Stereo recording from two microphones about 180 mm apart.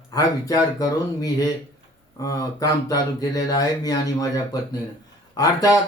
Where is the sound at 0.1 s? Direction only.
20° left (ahead or behind).